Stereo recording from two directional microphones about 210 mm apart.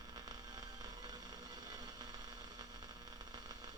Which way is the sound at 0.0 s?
20° right (ahead or behind).